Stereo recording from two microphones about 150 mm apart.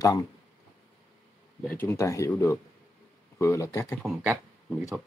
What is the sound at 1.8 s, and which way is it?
Speech, 20° left (ahead or behind).